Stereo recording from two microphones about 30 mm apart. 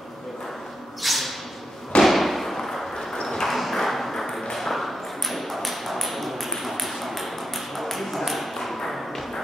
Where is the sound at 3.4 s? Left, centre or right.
Centre.